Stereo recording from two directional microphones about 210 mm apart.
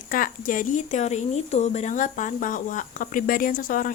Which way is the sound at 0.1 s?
40° left (ahead or behind).